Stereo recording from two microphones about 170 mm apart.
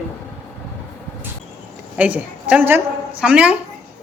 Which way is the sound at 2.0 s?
10° right (ahead or behind).